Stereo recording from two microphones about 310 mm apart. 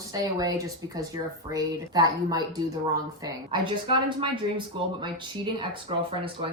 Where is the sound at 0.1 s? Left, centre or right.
Centre.